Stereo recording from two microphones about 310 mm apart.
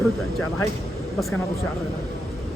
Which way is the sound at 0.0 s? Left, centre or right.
Centre.